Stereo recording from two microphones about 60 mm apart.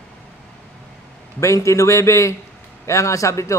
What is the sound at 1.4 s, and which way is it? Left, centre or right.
A man's voice, left.